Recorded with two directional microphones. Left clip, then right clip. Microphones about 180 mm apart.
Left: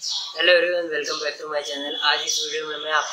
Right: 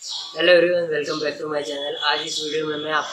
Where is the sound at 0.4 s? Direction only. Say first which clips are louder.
Right 2 dB; 10° left (ahead or behind).